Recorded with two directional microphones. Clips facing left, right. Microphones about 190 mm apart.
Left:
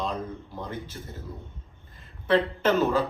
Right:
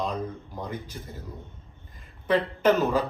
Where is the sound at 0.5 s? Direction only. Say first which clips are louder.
Even; 15° right (ahead or behind).